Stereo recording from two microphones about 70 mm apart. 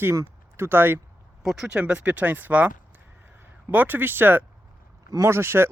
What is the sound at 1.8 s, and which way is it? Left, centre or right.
Speech, centre.